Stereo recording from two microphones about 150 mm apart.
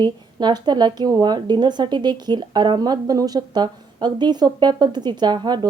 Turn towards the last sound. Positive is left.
turn(degrees=-30)  # may be behind; listen again after turning